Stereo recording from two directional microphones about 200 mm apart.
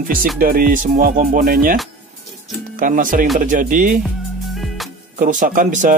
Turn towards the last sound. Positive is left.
turn(degrees=-40)  # may be behind; listen again after turning